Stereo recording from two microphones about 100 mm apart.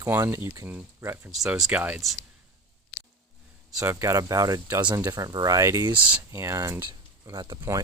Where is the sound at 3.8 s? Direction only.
30° right (ahead or behind).